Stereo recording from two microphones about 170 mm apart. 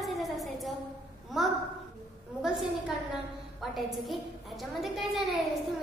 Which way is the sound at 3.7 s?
Centre (ahead or behind).